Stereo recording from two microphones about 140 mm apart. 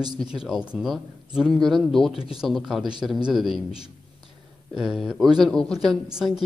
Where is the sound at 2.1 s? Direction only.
40° left (ahead or behind).